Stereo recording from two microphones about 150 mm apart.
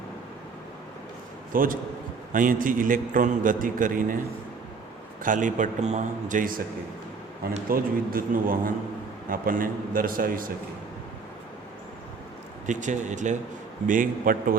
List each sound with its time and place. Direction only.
1.5 s a man's voice: 70° right (ahead or behind)
5.2 s a man's voice: 60° right (ahead or behind)
7.7 s a man's voice: 70° right (ahead or behind)
12.6 s a man's voice: 55° right (ahead or behind)